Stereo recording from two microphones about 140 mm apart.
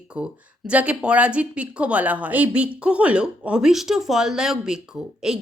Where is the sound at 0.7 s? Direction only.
10° right (ahead or behind).